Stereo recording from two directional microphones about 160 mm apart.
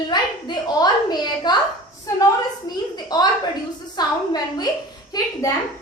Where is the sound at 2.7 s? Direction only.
25° left (ahead or behind).